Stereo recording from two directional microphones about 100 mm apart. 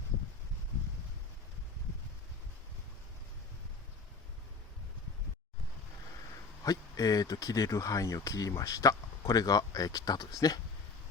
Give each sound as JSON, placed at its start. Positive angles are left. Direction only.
{"t": 6.7, "sound": "speech", "side_deg": 35}